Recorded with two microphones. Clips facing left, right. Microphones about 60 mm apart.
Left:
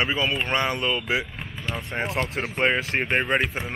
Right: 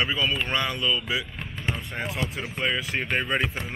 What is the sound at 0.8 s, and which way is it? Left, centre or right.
Speech, left.